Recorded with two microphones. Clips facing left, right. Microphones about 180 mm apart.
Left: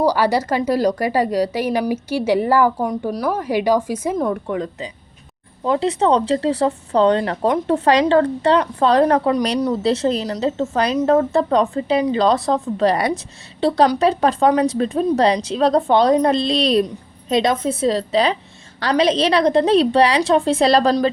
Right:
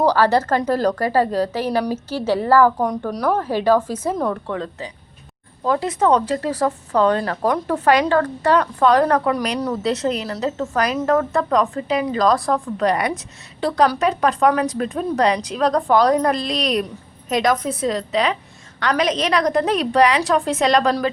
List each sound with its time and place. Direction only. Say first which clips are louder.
0.0 s a woman's voice: right 1 dB; 10° left (ahead or behind)
2.8 s speech: even; 5° left (ahead or behind)
3.4 s a woman's voice: left 2 dB; 15° left (ahead or behind); by 20.9 s 30° left (ahead or behind)